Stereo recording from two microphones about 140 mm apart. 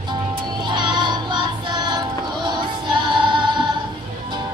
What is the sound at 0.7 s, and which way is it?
Child singing, 35° right (ahead or behind).